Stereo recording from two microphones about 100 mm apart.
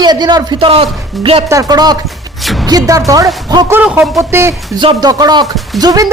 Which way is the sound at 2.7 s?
40° right (ahead or behind).